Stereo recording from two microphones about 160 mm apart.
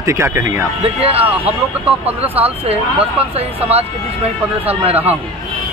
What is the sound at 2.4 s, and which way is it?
Speech, 35° right (ahead or behind).